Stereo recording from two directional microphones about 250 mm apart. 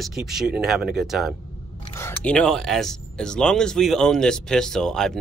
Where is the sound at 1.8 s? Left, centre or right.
Centre.